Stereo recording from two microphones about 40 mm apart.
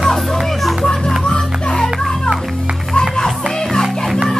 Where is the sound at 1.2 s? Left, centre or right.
Left.